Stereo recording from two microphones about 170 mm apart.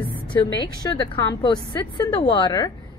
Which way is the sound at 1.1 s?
20° left (ahead or behind).